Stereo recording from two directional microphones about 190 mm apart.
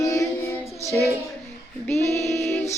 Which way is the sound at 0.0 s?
15° left (ahead or behind).